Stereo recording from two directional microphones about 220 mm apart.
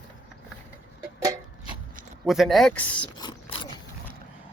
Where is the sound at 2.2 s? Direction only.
Centre (ahead or behind).